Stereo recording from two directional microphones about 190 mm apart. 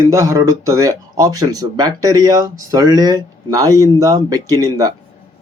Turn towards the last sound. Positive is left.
turn(degrees=-20)  # may be behind; listen again after turning